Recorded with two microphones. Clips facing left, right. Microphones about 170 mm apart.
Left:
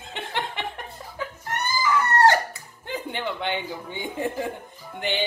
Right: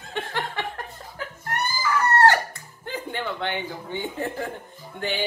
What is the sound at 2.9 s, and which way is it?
Speech, 20° left (ahead or behind).